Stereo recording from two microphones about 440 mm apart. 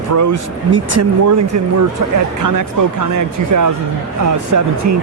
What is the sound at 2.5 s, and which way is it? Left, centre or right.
Speech, right.